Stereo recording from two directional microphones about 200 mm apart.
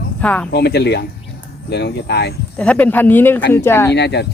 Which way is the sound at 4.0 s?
55° left (ahead or behind).